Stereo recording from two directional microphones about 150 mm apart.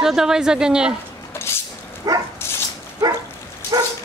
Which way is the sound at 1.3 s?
15° left (ahead or behind).